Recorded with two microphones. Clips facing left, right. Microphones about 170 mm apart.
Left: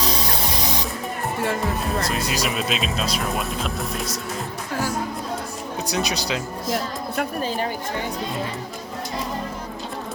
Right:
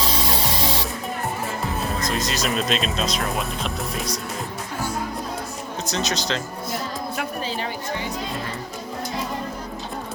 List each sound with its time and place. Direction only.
2.0 s speech: 10° left (ahead or behind)
5.9 s speech: 10° left (ahead or behind)
7.2 s a woman's voice: 45° left (ahead or behind)